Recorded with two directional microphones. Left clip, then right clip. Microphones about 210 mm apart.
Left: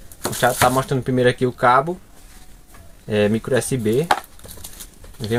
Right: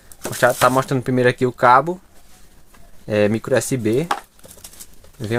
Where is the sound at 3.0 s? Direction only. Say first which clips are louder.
Right 1 dB; 50° right (ahead or behind).